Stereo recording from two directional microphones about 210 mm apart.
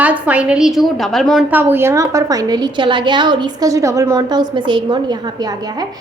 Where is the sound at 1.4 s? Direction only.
10° right (ahead or behind).